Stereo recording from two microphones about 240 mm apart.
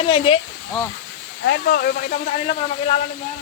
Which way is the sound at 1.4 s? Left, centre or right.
Left.